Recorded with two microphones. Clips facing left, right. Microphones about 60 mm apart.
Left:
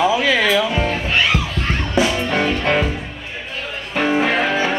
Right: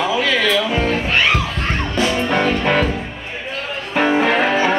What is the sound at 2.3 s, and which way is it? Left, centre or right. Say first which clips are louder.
Music: right 1 dB; centre.